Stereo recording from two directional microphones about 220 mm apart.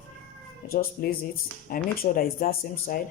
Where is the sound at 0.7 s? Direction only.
45° left (ahead or behind).